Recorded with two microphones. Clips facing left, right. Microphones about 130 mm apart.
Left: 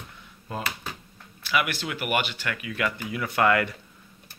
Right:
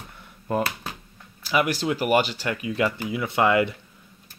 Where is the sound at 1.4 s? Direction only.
35° right (ahead or behind); by 3.6 s 20° right (ahead or behind).